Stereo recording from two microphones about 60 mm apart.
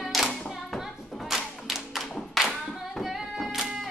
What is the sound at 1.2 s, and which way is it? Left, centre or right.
Clapping, centre.